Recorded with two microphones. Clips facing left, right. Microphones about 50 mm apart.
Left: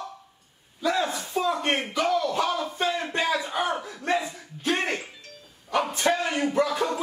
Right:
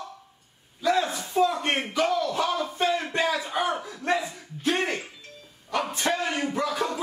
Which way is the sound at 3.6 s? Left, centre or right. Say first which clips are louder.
Even; centre.